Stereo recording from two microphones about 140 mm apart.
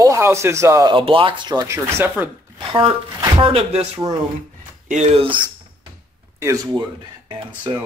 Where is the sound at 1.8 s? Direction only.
15° right (ahead or behind).